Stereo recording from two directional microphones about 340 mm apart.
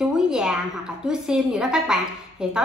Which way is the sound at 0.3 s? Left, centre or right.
Centre.